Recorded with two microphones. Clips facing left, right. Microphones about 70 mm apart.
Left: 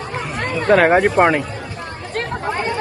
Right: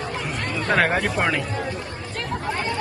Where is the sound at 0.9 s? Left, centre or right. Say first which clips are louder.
Left 9 dB; left.